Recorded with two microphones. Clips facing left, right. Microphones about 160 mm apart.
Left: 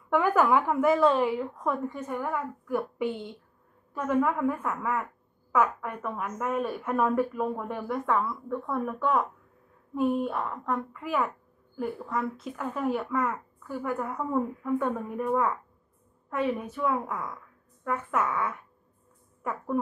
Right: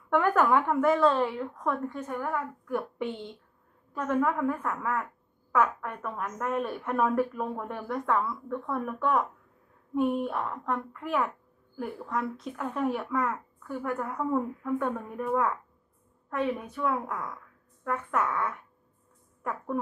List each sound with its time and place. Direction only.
0.1 s a woman's voice: 5° left (ahead or behind)